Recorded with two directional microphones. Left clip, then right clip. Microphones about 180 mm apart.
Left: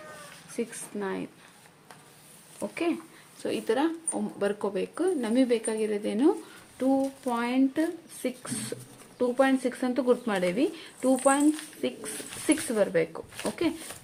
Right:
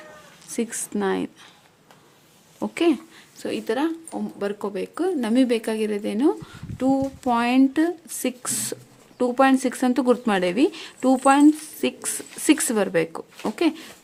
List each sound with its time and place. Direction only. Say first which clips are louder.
0.5 s a woman's voice: right 6 dB; 55° right (ahead or behind)
2.6 s a woman's voice: right 8 dB; 55° right (ahead or behind)
3.4 s speech: right 3 dB; 30° right (ahead or behind)
6.7 s speech: right 4 dB; 40° right (ahead or behind)